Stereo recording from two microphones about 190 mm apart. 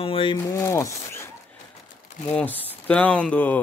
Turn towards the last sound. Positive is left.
turn(degrees=10)  # may be behind; listen again after turning